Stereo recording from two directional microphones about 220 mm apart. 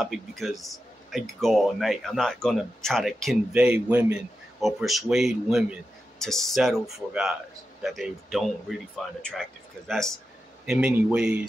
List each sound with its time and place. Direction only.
0.0 s speech: centre (ahead or behind)